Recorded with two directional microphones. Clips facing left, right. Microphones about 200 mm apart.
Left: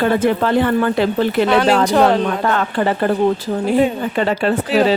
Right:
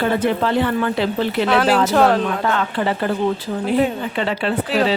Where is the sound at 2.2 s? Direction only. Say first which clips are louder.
Left 2 dB; 45° left (ahead or behind).